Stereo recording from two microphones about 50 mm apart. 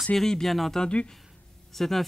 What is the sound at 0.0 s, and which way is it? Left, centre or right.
Speech, centre.